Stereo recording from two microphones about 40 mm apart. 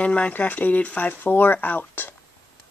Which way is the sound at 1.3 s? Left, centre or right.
Left.